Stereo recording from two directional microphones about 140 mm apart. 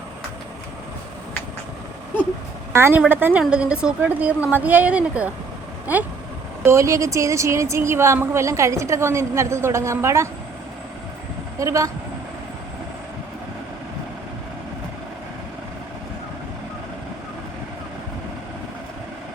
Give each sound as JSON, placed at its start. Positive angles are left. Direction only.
{"t": 2.7, "sound": "a woman's voice", "side_deg": -15}
{"t": 6.7, "sound": "a woman's voice", "side_deg": -20}
{"t": 11.6, "sound": "a woman's voice", "side_deg": -20}